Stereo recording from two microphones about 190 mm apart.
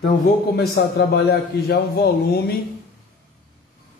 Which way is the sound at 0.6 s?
60° left (ahead or behind).